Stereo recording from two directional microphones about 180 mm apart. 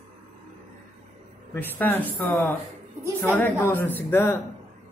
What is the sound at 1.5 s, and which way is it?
Speech, 10° left (ahead or behind).